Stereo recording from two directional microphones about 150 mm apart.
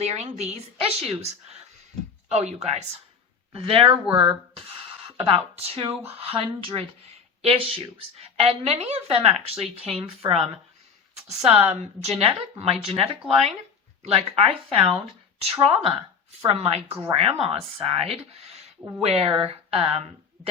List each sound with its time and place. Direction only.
0.0 s a woman's voice: 45° right (ahead or behind)